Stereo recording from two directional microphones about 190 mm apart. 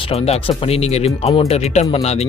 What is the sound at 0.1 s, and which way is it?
Speech, 30° left (ahead or behind).